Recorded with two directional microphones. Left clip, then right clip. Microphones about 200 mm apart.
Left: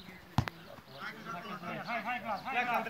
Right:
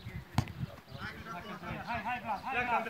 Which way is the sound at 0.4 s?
20° right (ahead or behind).